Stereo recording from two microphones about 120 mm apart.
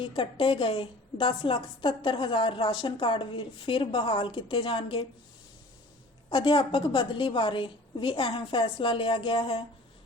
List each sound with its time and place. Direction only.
0.0 s a woman's voice: 45° left (ahead or behind)
6.3 s a woman's voice: 45° left (ahead or behind)